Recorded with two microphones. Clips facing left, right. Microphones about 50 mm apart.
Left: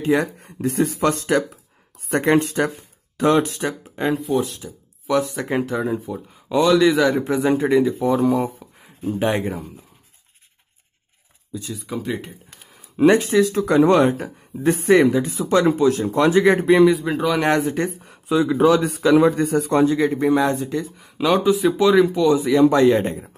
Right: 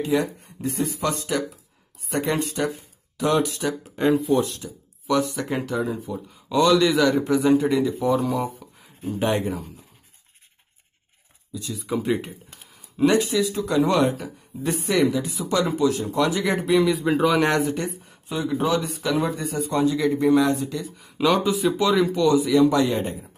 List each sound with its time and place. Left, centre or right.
0.0 s speech: left
0.6 s speech: left
4.0 s a man's voice: centre; by 8.9 s left
11.7 s speech: centre
12.9 s speech: left
16.9 s speech: centre
17.6 s speech: left
17.9 s speech: left
20.0 s speech: left
21.3 s a man's voice: centre
22.3 s a man's voice: left
22.6 s speech: left